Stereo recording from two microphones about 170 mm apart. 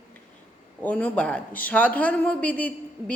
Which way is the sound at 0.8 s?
10° left (ahead or behind).